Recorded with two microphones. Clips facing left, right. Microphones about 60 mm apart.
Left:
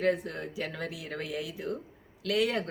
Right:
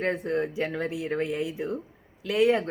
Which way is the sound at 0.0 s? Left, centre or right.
Right.